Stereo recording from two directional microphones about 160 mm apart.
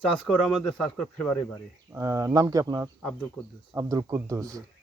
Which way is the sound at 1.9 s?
20° right (ahead or behind).